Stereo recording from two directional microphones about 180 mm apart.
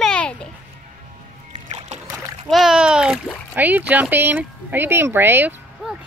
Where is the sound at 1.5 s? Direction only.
35° right (ahead or behind).